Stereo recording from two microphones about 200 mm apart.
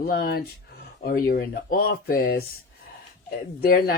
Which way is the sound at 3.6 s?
50° left (ahead or behind).